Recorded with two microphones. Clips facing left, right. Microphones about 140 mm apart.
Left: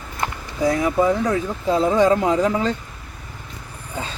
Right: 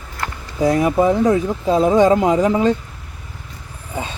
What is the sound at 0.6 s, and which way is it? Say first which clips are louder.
Speech: right 3 dB; 20° right (ahead or behind).